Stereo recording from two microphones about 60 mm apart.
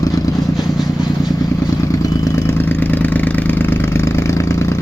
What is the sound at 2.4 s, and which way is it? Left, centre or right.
Vehicle, left.